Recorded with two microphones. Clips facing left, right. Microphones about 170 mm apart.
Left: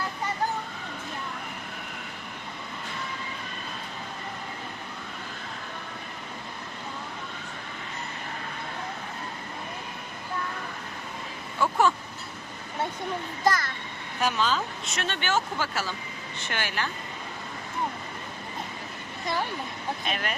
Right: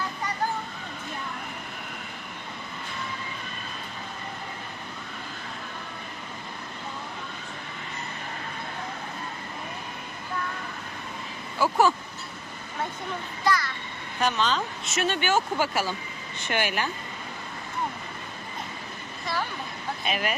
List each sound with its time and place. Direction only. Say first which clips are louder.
11.6 s speech: right 2 dB; 5° right (ahead or behind)
13.4 s a sound: even; 45° left (ahead or behind)
14.2 s a woman's voice: right 1 dB; 5° left (ahead or behind)
14.9 s speech: right 4 dB; 10° right (ahead or behind)
20.1 s speech: right 4 dB; 5° right (ahead or behind)